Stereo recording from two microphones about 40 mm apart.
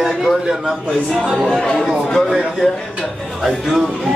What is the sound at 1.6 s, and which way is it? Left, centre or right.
Speech, left.